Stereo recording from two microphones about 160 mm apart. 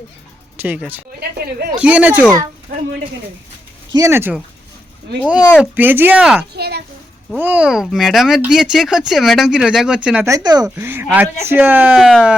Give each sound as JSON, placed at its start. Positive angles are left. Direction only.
{"t": 0.6, "sound": "speech", "side_deg": -10}
{"t": 1.5, "sound": "speech", "side_deg": -75}
{"t": 1.8, "sound": "speech", "side_deg": -10}
{"t": 3.9, "sound": "speech", "side_deg": -15}
{"t": 6.5, "sound": "a sound", "side_deg": -90}
{"t": 7.3, "sound": "speech", "side_deg": -10}
{"t": 10.2, "sound": "speech", "side_deg": -20}